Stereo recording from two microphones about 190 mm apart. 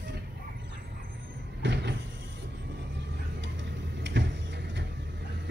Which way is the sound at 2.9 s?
70° right (ahead or behind).